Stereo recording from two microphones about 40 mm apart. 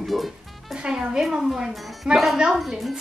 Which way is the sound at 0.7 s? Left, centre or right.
Right.